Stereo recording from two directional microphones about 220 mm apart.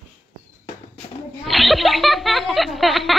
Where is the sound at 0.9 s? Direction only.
Centre (ahead or behind).